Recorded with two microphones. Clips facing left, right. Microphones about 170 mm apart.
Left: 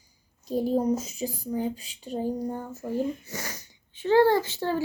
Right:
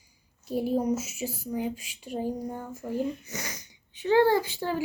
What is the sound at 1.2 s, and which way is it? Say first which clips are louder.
Speech: left 1 dB; 15° left (ahead or behind).